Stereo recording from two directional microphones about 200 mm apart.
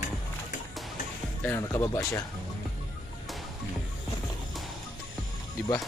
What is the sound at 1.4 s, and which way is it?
Speech, 15° left (ahead or behind).